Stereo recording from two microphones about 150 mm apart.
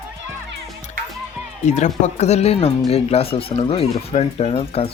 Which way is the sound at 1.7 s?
50° left (ahead or behind).